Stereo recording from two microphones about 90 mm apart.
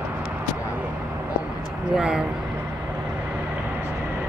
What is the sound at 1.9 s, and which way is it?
Speech, 5° right (ahead or behind).